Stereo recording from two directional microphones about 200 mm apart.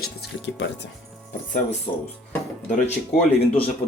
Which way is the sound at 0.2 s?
60° left (ahead or behind).